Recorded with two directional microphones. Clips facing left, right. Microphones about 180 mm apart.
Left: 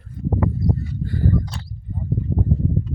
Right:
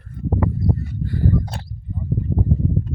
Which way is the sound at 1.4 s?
55° right (ahead or behind).